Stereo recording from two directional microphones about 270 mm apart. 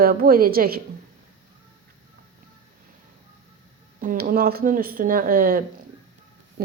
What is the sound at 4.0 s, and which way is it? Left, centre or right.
A woman's voice, right.